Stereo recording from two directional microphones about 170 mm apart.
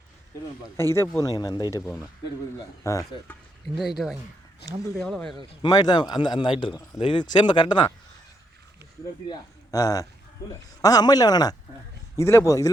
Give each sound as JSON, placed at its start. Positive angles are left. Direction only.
{"t": 0.8, "sound": "a man's voice", "side_deg": 15}
{"t": 3.8, "sound": "speech", "side_deg": 0}
{"t": 5.6, "sound": "a man's voice", "side_deg": 25}
{"t": 9.3, "sound": "a man's voice", "side_deg": 20}